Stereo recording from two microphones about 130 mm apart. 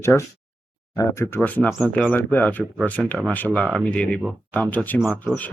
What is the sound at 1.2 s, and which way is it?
Speech, 15° left (ahead or behind).